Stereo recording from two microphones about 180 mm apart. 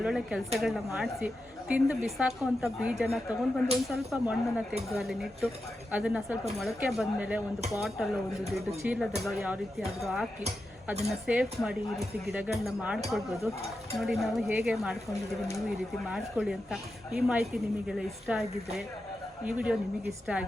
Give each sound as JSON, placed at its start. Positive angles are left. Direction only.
{"t": 0.0, "sound": "speech", "side_deg": -5}
{"t": 11.3, "sound": "speech", "side_deg": -5}
{"t": 16.0, "sound": "speech", "side_deg": -5}
{"t": 19.5, "sound": "speech", "side_deg": -5}